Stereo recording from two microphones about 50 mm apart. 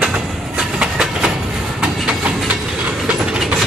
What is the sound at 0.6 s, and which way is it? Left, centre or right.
Train, centre.